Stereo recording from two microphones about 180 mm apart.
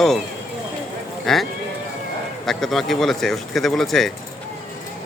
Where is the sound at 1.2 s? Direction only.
Centre (ahead or behind).